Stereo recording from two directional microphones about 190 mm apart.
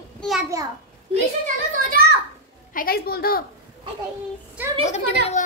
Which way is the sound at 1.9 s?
55° right (ahead or behind).